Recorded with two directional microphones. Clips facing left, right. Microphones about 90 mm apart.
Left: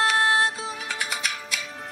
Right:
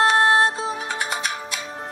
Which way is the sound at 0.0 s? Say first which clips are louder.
Right 5 dB; 35° right (ahead or behind).